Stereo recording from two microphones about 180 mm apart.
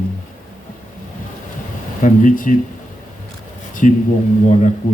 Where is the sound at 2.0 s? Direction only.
45° left (ahead or behind).